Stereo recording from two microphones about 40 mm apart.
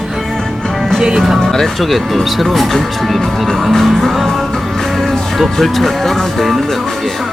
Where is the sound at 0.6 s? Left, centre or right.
Centre.